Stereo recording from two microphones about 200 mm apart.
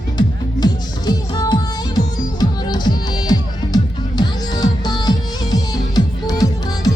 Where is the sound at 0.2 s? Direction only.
20° left (ahead or behind).